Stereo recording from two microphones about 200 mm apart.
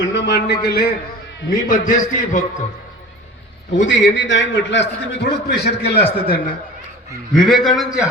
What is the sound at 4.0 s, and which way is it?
A man's voice, 65° left (ahead or behind).